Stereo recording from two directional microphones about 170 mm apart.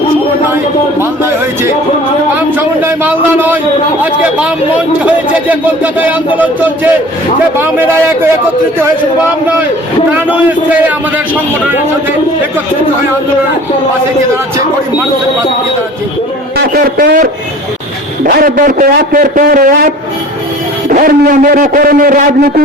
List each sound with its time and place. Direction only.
2.6 s speech: 10° right (ahead or behind)
10.1 s speech: 10° right (ahead or behind)
16.7 s a man's voice: 60° right (ahead or behind)
18.3 s a man's voice: 55° right (ahead or behind)